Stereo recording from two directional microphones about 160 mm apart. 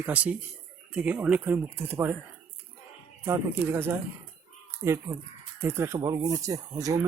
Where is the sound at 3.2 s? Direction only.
15° right (ahead or behind).